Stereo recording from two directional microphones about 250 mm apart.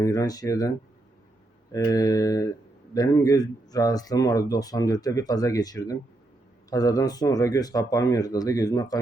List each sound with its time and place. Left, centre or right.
0.0 s speech: centre
1.7 s speech: centre